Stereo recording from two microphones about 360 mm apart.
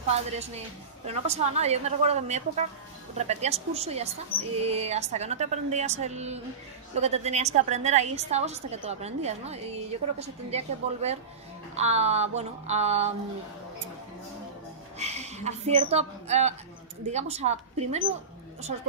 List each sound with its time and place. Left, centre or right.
0.4 s a woman's voice: centre
15.0 s a woman's voice: centre